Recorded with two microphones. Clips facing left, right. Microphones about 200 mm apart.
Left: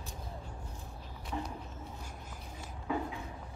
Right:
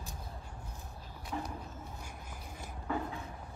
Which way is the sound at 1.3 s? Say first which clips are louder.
Even; 5° left (ahead or behind).